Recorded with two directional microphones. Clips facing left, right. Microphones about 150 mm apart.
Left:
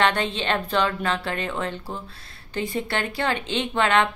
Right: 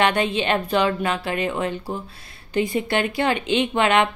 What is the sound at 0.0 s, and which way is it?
A woman's voice, 15° right (ahead or behind).